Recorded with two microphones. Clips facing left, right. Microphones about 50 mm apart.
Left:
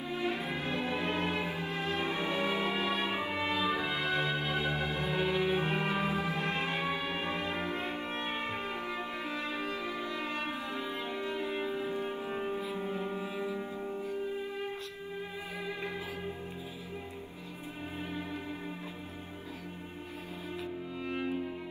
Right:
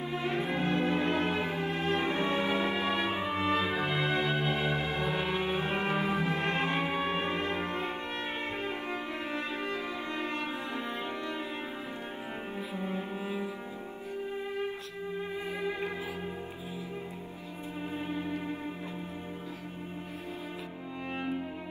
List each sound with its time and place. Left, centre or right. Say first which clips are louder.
0.1 s music: right 2 dB; right
12.5 s music: left 1 dB; centre
21.1 s cello: even; right